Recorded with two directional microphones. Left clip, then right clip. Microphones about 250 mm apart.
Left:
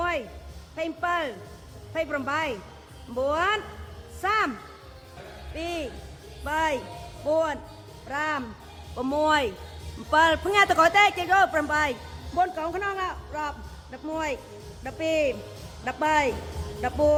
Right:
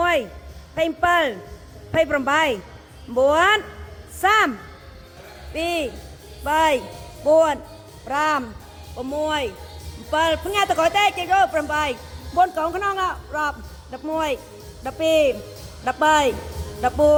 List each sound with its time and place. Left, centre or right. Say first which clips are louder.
0.0 s a sound: right 8 dB; centre
0.8 s speech: right 9 dB; centre
5.5 s speech: right 8 dB; centre
9.0 s a man's voice: left 1 dB; centre
12.4 s a man's voice: right 6 dB; centre